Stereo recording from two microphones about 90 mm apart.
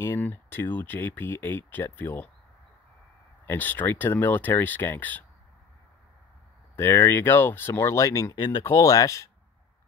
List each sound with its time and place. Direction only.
0.0 s speech: 25° left (ahead or behind)
3.4 s speech: 20° left (ahead or behind)
6.8 s speech: 30° left (ahead or behind)
8.4 s speech: 60° left (ahead or behind)
8.7 s speech: 40° left (ahead or behind)